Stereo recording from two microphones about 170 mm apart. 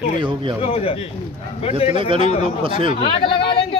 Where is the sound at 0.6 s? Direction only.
35° left (ahead or behind).